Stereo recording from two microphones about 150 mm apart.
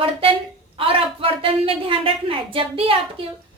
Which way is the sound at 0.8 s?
40° right (ahead or behind).